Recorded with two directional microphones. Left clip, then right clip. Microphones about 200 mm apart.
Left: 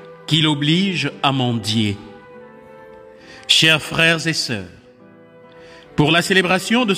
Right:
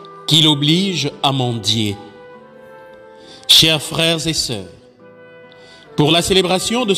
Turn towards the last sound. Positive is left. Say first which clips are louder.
# even
turn(degrees=5)  # may be behind; listen again after turning